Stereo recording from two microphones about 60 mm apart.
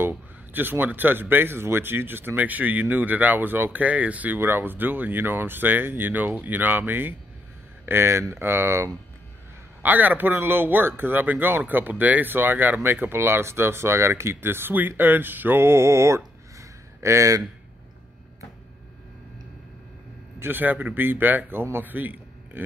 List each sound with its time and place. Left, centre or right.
0.1 s speech: right
4.4 s speech: right
9.8 s speech: right
16.5 s a sound: right
20.3 s a man's voice: right